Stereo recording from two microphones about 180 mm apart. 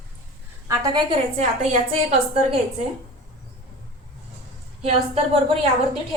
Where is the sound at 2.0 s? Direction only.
40° right (ahead or behind).